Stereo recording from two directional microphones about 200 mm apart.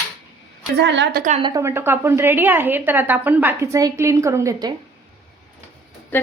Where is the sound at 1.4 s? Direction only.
15° right (ahead or behind).